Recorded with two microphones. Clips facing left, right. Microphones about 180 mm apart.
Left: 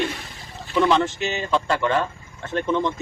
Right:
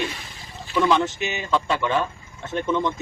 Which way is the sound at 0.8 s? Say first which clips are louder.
Left 1 dB; centre (ahead or behind).